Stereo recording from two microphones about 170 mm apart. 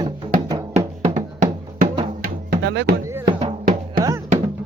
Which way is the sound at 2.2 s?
75° right (ahead or behind).